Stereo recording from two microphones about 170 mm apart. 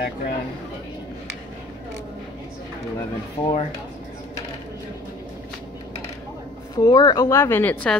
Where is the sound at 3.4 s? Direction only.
25° left (ahead or behind).